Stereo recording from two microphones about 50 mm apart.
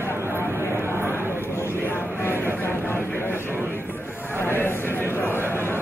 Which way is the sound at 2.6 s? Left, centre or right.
Left.